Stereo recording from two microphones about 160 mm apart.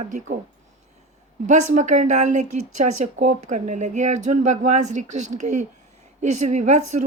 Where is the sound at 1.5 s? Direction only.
50° right (ahead or behind).